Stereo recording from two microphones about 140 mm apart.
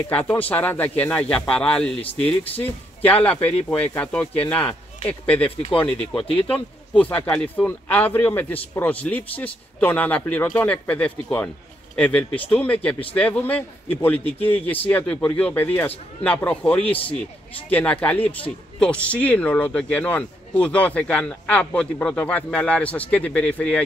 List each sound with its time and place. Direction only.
0.1 s speech: 10° left (ahead or behind)
5.9 s speech: 40° left (ahead or behind)
6.9 s speech: 10° left (ahead or behind)